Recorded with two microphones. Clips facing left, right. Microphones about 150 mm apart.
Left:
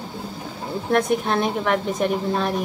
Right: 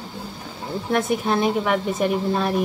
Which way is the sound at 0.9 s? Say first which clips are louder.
Left 1 dB; 5° right (ahead or behind).